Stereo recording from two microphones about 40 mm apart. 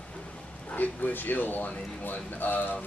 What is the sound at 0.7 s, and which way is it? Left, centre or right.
Speech, left.